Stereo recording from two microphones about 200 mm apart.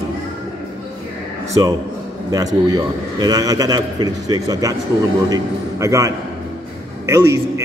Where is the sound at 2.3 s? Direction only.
15° right (ahead or behind).